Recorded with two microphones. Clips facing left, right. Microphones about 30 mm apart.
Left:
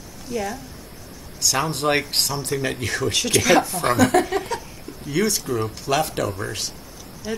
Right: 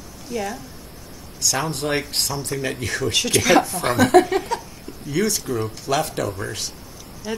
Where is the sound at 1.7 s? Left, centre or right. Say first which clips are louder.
Left 3 dB; left.